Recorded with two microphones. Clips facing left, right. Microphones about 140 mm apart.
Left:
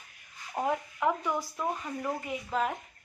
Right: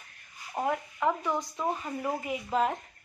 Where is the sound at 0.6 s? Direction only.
5° right (ahead or behind).